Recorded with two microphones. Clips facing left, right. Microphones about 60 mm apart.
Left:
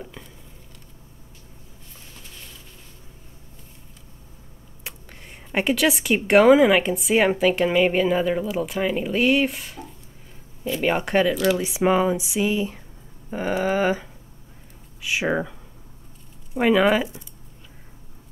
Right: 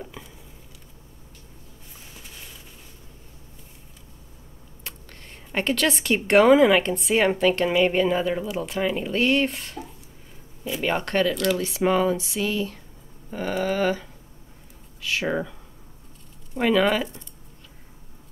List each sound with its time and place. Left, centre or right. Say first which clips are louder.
0.0 s patter: even; centre
5.5 s speech: left 3 dB; centre
16.5 s speech: left 2 dB; centre